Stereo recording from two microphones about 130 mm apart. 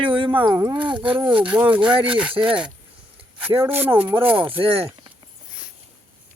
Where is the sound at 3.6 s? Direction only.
15° right (ahead or behind).